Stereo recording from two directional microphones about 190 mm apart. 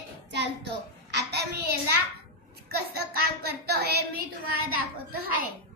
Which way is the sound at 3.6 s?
55° right (ahead or behind).